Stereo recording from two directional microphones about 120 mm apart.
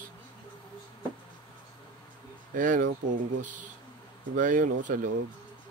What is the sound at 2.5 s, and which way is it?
Speech, 90° right.